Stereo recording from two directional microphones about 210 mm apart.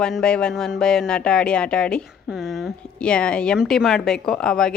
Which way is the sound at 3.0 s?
5° left (ahead or behind).